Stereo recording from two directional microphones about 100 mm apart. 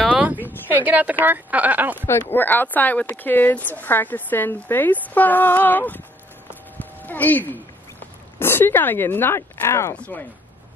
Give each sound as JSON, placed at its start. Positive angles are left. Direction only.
{"t": 0.1, "sound": "a sound", "side_deg": -15}
{"t": 0.7, "sound": "speech", "side_deg": -15}
{"t": 2.0, "sound": "speech", "side_deg": 20}
{"t": 6.8, "sound": "a sound", "side_deg": 15}
{"t": 8.4, "sound": "speech", "side_deg": 25}
{"t": 9.9, "sound": "speech", "side_deg": 15}